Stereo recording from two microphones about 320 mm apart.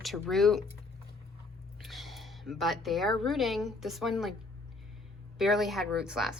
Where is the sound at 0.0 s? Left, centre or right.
Centre.